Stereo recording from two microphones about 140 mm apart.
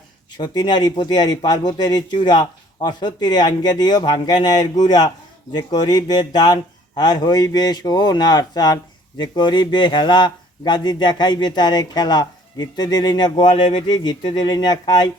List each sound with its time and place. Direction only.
0.3 s speech: 30° left (ahead or behind)